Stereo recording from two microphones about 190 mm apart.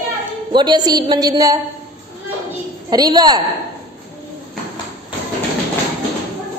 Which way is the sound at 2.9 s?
20° right (ahead or behind).